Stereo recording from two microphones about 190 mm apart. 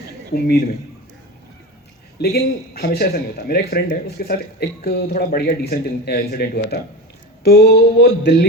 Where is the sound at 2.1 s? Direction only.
55° left (ahead or behind).